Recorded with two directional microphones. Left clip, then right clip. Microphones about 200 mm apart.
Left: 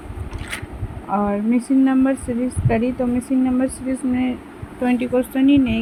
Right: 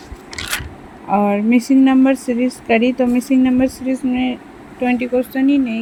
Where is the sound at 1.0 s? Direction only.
25° right (ahead or behind).